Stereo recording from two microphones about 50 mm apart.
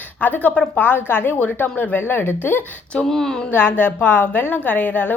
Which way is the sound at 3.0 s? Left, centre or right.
Centre.